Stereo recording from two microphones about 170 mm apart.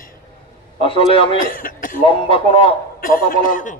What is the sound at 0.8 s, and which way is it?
Speech, 35° left (ahead or behind).